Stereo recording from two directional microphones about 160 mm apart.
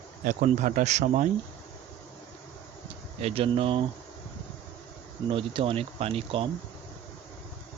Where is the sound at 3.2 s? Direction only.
40° right (ahead or behind).